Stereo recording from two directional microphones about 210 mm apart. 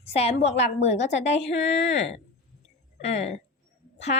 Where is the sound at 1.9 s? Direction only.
30° left (ahead or behind).